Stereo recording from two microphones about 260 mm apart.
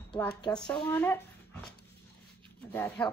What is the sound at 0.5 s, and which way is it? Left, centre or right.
Speech, centre.